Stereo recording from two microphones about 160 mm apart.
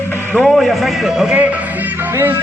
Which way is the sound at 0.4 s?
Centre (ahead or behind).